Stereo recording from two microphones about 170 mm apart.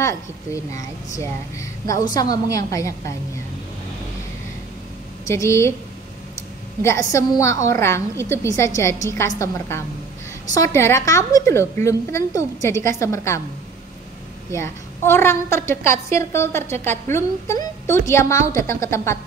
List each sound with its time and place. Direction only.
0.7 s a woman's voice: 20° left (ahead or behind)
5.2 s a woman's voice: 15° left (ahead or behind)
6.8 s a woman's voice: 15° left (ahead or behind)
14.5 s a woman's voice: 15° left (ahead or behind)